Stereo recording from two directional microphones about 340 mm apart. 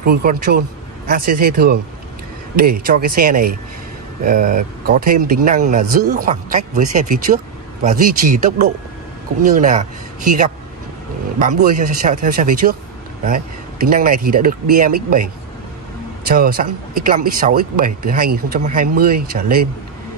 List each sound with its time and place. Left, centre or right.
0.0 s speech: right
2.9 s speech: right
16.3 s speech: right